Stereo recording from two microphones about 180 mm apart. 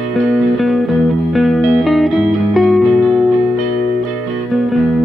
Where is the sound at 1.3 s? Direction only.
Centre (ahead or behind).